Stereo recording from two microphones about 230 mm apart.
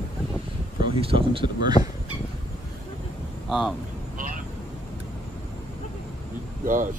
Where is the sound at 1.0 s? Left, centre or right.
Right.